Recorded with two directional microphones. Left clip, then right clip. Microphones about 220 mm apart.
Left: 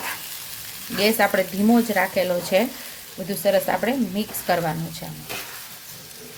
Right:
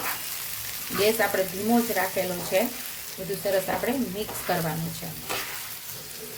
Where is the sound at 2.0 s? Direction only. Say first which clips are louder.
Left 6 dB; 45° left (ahead or behind).